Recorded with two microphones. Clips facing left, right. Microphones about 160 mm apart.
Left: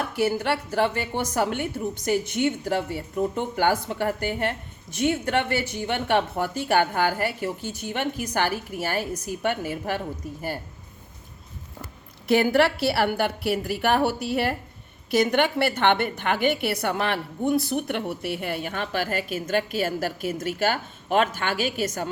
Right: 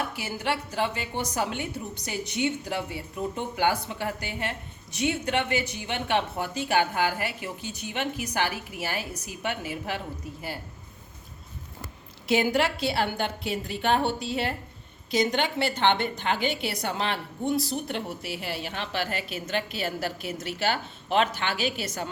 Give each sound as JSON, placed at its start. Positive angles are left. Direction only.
{"t": 0.2, "sound": "a woman's voice", "side_deg": 50}
{"t": 12.3, "sound": "a woman's voice", "side_deg": -20}
{"t": 12.7, "sound": "a woman's voice", "side_deg": 65}